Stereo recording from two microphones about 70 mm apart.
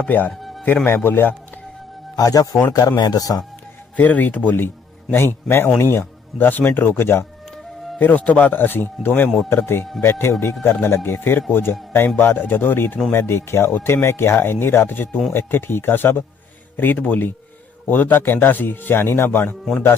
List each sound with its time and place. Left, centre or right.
0.0 s a man's voice: left
0.3 s music: centre
0.9 s speech: left
2.1 s speech: left
3.0 s speech: left
3.9 s a man's voice: left
7.9 s a man's voice: left